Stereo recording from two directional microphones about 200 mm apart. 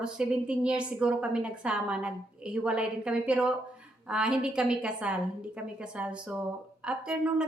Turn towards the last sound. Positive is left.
turn(degrees=-5)  # may be behind; listen again after turning